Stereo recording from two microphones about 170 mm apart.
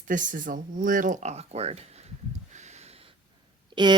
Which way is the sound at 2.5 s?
40° right (ahead or behind).